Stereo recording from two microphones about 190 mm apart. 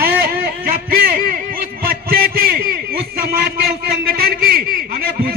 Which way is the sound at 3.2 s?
55° right (ahead or behind).